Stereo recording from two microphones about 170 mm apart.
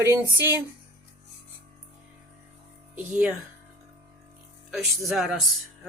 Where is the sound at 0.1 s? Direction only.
15° right (ahead or behind).